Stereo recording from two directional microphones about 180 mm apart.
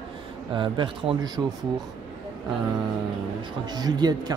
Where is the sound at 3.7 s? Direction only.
25° right (ahead or behind).